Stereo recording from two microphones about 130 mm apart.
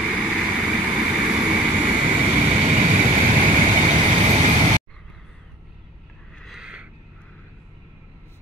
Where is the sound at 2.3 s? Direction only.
60° right (ahead or behind); by 3.8 s 40° right (ahead or behind).